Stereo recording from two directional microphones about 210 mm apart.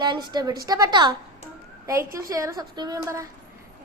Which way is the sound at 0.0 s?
20° right (ahead or behind).